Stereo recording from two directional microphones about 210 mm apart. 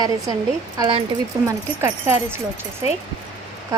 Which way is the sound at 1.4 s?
10° right (ahead or behind).